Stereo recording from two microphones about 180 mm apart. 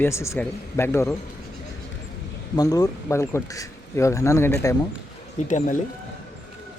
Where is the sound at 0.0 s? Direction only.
15° left (ahead or behind).